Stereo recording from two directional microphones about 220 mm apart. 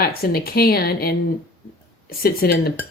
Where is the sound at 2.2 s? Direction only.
45° left (ahead or behind).